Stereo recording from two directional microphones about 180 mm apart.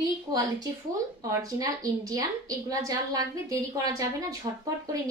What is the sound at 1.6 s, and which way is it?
A woman's voice, 20° right (ahead or behind).